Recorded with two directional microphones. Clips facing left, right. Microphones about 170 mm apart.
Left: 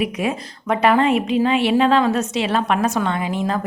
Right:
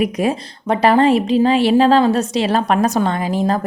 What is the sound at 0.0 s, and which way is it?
Speech, 35° right (ahead or behind).